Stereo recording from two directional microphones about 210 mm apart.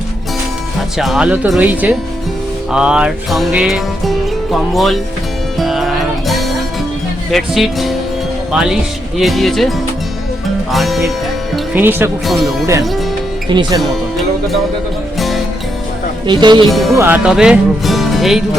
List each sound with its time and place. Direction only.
0.9 s speech: centre (ahead or behind)
2.7 s music: 5° right (ahead or behind)
7.3 s speech: centre (ahead or behind)
10.7 s music: centre (ahead or behind)
11.5 s speech: 10° right (ahead or behind)
13.5 s speech: 20° right (ahead or behind)
16.2 s speech: 20° right (ahead or behind)
16.6 s speech: centre (ahead or behind)